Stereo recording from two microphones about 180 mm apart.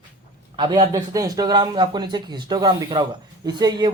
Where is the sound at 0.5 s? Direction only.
25° right (ahead or behind).